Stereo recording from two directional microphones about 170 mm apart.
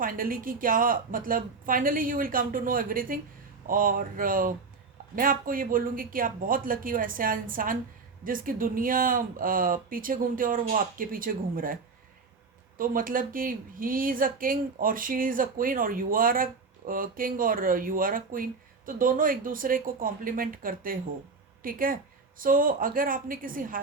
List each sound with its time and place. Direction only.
0.0 s speech: 55° right (ahead or behind)